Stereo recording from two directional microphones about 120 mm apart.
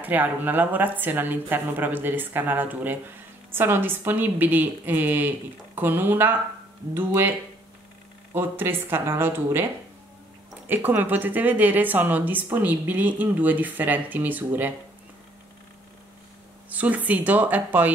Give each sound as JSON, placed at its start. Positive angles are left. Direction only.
{"t": 0.0, "sound": "speech", "side_deg": -15}
{"t": 10.7, "sound": "speech", "side_deg": -15}
{"t": 16.6, "sound": "speech", "side_deg": -15}